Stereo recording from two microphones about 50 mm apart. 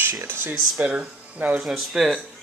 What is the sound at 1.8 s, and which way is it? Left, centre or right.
Speech, centre.